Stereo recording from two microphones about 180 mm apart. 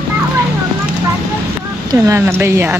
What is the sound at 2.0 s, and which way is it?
Speech, 15° right (ahead or behind).